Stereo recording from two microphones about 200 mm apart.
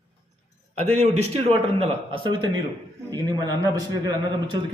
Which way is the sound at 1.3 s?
30° right (ahead or behind).